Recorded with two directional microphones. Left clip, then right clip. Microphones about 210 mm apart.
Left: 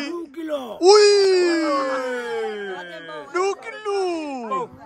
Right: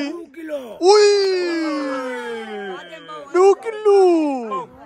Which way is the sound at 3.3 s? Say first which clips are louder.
Right 9 dB; centre (ahead or behind).